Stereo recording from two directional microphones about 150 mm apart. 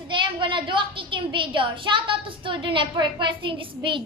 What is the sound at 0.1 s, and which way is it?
A woman's voice, 35° right (ahead or behind).